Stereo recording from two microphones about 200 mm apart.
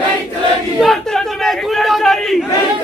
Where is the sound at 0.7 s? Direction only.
Centre (ahead or behind).